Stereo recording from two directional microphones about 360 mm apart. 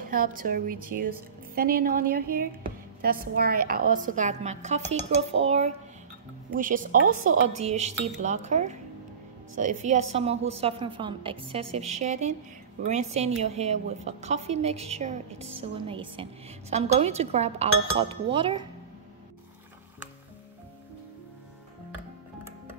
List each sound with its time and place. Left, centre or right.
0.0 s a woman's voice: right